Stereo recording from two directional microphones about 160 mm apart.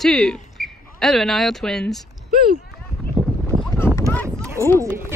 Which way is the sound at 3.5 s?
25° right (ahead or behind).